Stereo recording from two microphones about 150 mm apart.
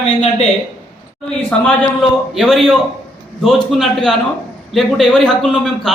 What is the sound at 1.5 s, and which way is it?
Speech, 5° left (ahead or behind).